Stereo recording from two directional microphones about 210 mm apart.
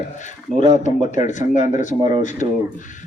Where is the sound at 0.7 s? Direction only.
35° left (ahead or behind).